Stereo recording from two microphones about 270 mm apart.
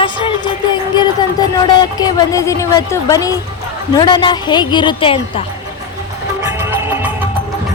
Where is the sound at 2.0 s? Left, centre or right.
Centre.